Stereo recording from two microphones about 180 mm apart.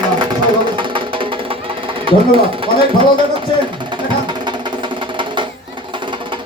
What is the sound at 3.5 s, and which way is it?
Speech, 25° left (ahead or behind).